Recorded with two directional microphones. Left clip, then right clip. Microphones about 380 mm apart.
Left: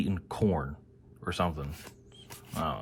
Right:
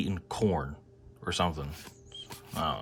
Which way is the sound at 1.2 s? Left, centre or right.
Centre.